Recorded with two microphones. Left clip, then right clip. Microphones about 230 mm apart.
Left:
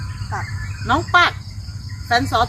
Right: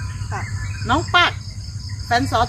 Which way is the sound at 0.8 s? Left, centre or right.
Centre.